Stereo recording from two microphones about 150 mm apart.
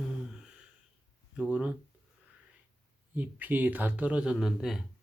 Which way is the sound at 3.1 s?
10° right (ahead or behind).